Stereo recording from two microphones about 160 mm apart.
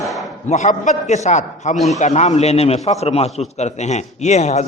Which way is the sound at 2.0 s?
45° left (ahead or behind).